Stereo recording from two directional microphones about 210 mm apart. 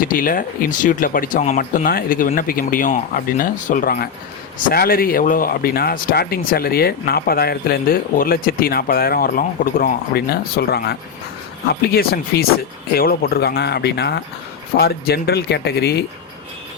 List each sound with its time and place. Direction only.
0.0 s speech: 40° left (ahead or behind)